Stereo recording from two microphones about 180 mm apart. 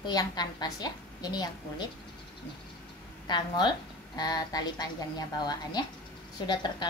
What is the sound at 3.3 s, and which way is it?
A woman's voice, 25° left (ahead or behind).